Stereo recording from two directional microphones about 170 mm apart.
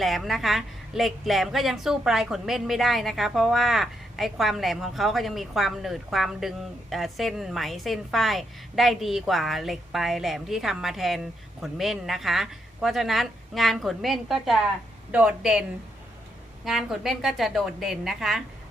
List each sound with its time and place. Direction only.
0.0 s a woman's voice: centre (ahead or behind)
16.6 s a woman's voice: centre (ahead or behind)